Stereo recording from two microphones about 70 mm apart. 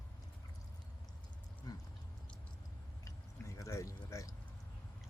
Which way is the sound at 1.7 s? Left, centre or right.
Left.